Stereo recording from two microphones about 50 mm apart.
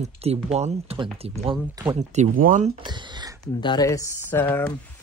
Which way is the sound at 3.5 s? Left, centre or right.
Left.